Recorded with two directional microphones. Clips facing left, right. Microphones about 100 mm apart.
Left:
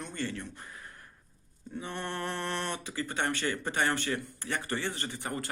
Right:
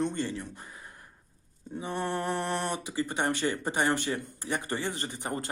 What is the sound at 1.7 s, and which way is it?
Speech, 15° right (ahead or behind).